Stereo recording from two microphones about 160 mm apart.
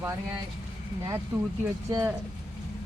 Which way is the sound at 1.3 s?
10° right (ahead or behind).